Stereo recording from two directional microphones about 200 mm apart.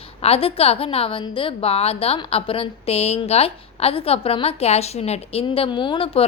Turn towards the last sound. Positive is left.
turn(degrees=30)  # may be behind; listen again after turning